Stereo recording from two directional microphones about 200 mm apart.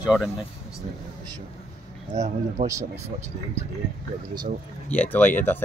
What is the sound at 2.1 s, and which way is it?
Speech, 35° right (ahead or behind).